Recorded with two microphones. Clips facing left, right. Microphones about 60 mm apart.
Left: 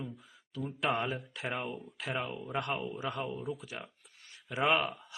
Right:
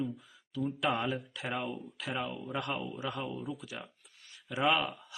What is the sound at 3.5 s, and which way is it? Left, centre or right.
Speech, left.